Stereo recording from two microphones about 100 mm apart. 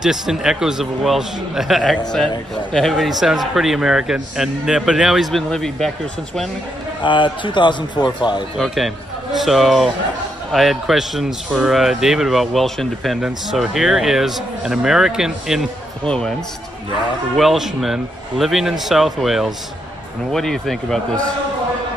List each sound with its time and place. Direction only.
0.0 s a man's voice: 5° right (ahead or behind)
7.0 s a man's voice: 55° left (ahead or behind)
8.5 s a man's voice: centre (ahead or behind)
16.1 s speech: 5° left (ahead or behind)
17.4 s a man's voice: centre (ahead or behind)